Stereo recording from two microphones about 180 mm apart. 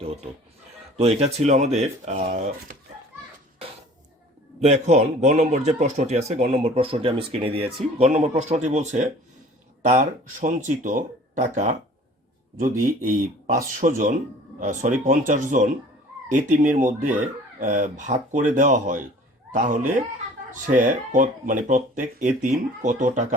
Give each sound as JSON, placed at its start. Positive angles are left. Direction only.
{"t": 0.9, "sound": "a man's voice", "side_deg": -35}
{"t": 4.6, "sound": "a man's voice", "side_deg": -40}